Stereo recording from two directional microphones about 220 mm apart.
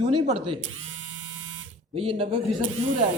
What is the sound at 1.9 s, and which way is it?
Speech, 25° right (ahead or behind).